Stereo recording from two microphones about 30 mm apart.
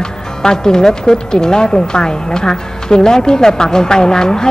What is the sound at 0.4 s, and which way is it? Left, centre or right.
Speech, left.